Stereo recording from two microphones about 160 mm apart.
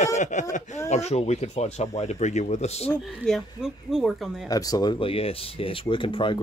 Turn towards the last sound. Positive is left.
turn(degrees=30)  # may be behind; listen again after turning